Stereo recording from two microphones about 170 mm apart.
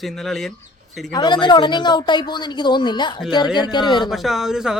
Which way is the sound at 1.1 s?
25° left (ahead or behind).